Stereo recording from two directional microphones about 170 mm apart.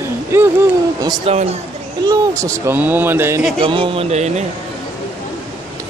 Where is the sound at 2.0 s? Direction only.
20° right (ahead or behind).